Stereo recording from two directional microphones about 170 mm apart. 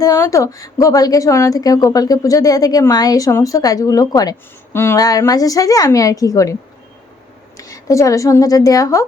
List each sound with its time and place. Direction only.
0.0 s a woman's voice: 20° left (ahead or behind)